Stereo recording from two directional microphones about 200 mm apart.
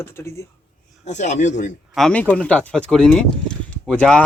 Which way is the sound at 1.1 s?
35° left (ahead or behind).